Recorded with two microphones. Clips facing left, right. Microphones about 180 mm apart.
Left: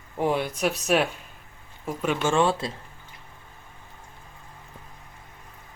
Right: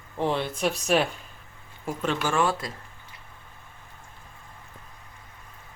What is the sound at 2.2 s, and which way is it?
Speech, 25° left (ahead or behind).